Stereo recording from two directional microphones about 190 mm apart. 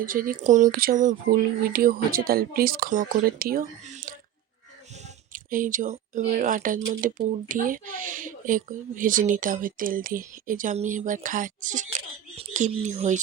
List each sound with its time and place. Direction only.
0.0 s speech: 50° right (ahead or behind)
5.3 s speech: 45° right (ahead or behind)